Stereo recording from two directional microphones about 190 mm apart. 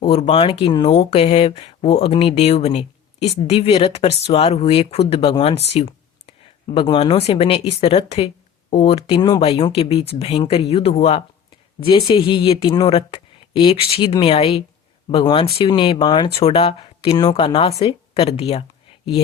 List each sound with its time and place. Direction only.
0.0 s speech: 35° left (ahead or behind)